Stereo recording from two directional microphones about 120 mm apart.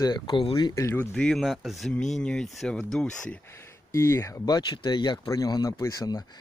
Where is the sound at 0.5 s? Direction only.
25° left (ahead or behind).